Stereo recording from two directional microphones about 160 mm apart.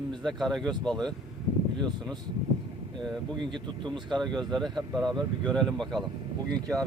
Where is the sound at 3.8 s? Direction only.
30° right (ahead or behind).